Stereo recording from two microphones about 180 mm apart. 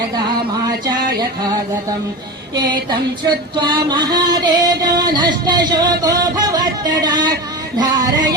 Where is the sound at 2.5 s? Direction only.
25° right (ahead or behind).